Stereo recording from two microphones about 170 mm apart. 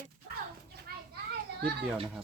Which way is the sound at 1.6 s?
70° right (ahead or behind).